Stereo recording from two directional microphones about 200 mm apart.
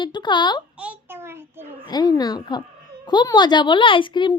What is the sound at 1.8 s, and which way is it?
A child's voice, 20° left (ahead or behind).